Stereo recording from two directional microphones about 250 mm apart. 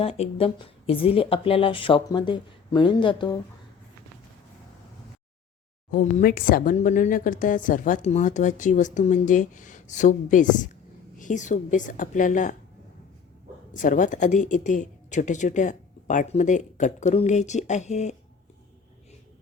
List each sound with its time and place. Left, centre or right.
0.0 s speech: left
5.9 s speech: left
13.7 s speech: left